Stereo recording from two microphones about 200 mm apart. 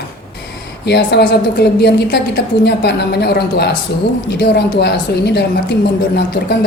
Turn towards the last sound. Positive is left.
turn(degrees=55)  # may be behind; listen again after turning